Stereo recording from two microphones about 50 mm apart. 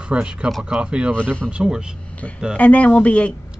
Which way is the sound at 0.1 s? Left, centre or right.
Centre.